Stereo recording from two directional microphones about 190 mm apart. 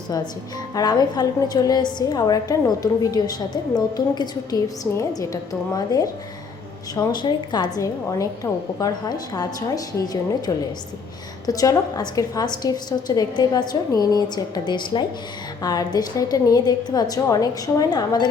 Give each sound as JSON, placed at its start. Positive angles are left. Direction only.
{"t": 0.7, "sound": "a woman's voice", "side_deg": 20}